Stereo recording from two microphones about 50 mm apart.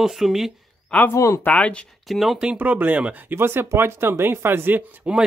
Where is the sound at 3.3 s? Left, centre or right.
Right.